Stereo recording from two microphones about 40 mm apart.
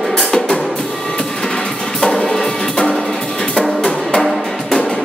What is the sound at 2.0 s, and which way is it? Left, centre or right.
Music, centre.